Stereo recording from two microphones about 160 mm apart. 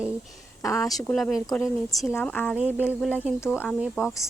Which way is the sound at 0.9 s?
Centre (ahead or behind).